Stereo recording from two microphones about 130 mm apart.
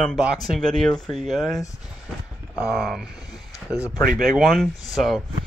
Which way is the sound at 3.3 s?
25° left (ahead or behind).